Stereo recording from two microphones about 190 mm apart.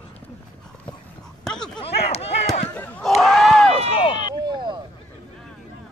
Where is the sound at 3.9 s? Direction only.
30° left (ahead or behind).